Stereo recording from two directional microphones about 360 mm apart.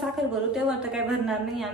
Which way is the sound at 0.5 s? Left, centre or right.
Centre.